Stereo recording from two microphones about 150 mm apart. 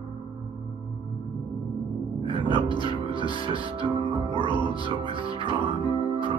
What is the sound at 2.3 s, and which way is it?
Music, 30° left (ahead or behind).